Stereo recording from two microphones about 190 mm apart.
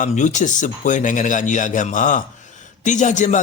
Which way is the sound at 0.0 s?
40° left (ahead or behind).